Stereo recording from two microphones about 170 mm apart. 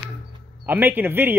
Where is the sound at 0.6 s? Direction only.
10° right (ahead or behind).